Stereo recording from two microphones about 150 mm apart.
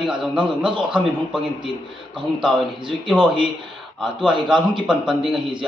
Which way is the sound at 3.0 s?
5° right (ahead or behind).